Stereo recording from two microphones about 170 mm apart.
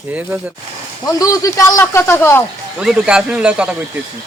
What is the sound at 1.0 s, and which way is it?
Speech, 20° left (ahead or behind).